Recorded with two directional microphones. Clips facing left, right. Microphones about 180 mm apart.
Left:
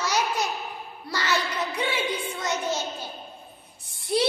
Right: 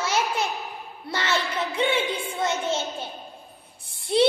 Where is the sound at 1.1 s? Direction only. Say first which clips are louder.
Right 1 dB; 25° right (ahead or behind).